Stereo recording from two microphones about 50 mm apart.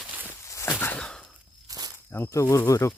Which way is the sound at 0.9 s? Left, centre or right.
Centre.